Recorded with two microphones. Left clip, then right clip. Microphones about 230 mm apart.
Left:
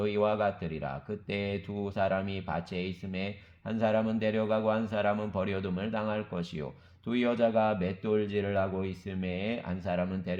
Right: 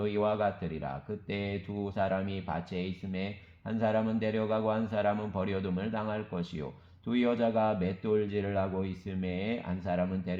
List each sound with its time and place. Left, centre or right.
0.0 s speech: left